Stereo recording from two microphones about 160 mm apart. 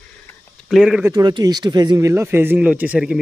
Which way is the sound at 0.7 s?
5° right (ahead or behind).